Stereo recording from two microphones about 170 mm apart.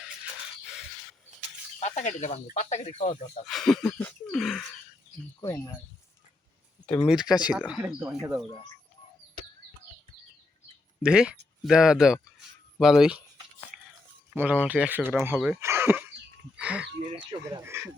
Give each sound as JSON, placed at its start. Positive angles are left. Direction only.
{"t": 1.8, "sound": "speech", "side_deg": 45}
{"t": 3.4, "sound": "speech", "side_deg": 0}
{"t": 5.4, "sound": "speech", "side_deg": 20}
{"t": 6.8, "sound": "speech", "side_deg": 10}
{"t": 7.1, "sound": "speech", "side_deg": -5}
{"t": 11.0, "sound": "speech", "side_deg": -5}
{"t": 14.3, "sound": "speech", "side_deg": -10}
{"t": 15.6, "sound": "a sound", "side_deg": -15}
{"t": 16.6, "sound": "speech", "side_deg": -5}
{"t": 17.1, "sound": "speech", "side_deg": -30}
{"t": 17.6, "sound": "speech", "side_deg": -15}